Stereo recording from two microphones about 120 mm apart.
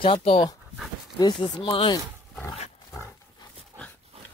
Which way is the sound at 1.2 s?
40° left (ahead or behind).